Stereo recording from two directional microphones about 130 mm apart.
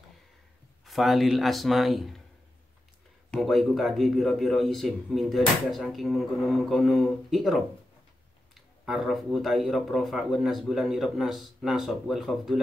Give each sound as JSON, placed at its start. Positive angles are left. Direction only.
{"t": 0.8, "sound": "a man's voice", "side_deg": 0}
{"t": 3.3, "sound": "a man's voice", "side_deg": 0}